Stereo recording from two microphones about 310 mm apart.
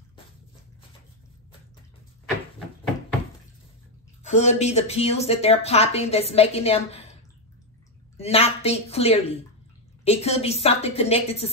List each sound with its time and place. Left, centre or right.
4.2 s speech: left
8.2 s speech: centre